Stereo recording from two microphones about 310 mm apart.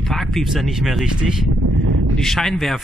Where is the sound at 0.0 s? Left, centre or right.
Centre.